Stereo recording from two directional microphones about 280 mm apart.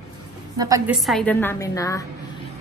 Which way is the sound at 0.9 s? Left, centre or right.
Centre.